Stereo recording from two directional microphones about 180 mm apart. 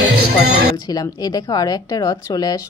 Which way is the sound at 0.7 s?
20° left (ahead or behind).